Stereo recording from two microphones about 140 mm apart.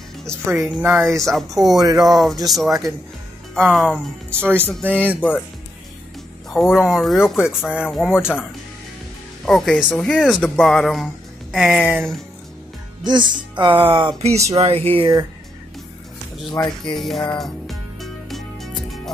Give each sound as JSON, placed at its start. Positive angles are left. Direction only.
{"t": 0.6, "sound": "speech", "side_deg": -10}
{"t": 1.2, "sound": "speech", "side_deg": 0}
{"t": 1.8, "sound": "speech", "side_deg": -25}
{"t": 2.5, "sound": "speech", "side_deg": 0}
{"t": 4.3, "sound": "speech", "side_deg": -15}
{"t": 6.5, "sound": "speech", "side_deg": -5}
{"t": 9.5, "sound": "speech", "side_deg": 5}
{"t": 13.0, "sound": "speech", "side_deg": -35}
{"t": 16.5, "sound": "speech", "side_deg": 30}
{"t": 16.9, "sound": "speech", "side_deg": 0}
{"t": 17.3, "sound": "music", "side_deg": 0}